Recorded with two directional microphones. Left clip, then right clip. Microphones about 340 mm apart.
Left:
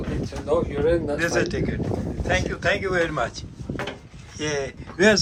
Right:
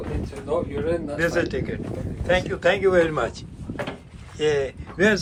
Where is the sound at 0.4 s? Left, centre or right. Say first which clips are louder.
Left 3 dB; left.